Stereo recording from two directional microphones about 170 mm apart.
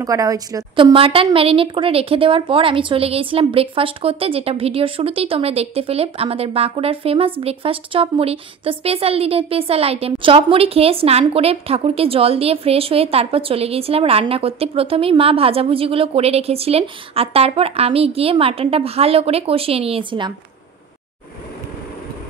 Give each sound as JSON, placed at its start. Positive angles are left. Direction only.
{"t": 0.0, "sound": "a woman's voice", "side_deg": -20}
{"t": 0.9, "sound": "speech", "side_deg": -35}